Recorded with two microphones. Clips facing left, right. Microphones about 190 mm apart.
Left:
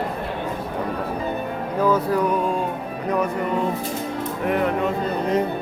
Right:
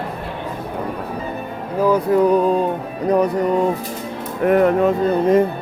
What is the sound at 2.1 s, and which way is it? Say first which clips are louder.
Music: right 7 dB; 35° right (ahead or behind).